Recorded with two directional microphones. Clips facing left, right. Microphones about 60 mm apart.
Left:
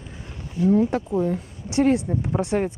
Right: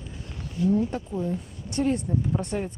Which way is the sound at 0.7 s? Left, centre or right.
Left.